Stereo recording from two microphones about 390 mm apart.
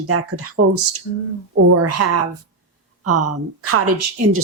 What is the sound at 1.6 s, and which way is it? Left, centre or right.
Speech, right.